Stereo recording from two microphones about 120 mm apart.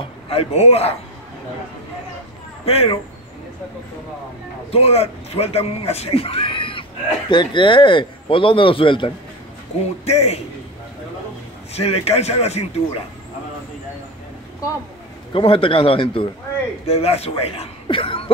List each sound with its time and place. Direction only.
0.3 s speech: 55° left (ahead or behind)
2.6 s speech: 55° left (ahead or behind)
4.6 s speech: 55° left (ahead or behind)
10.0 s speech: 65° left (ahead or behind)
11.7 s speech: 60° left (ahead or behind)
15.3 s speech: 50° left (ahead or behind)